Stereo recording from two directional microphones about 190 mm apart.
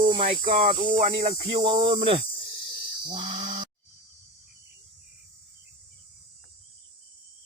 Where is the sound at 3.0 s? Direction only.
25° right (ahead or behind).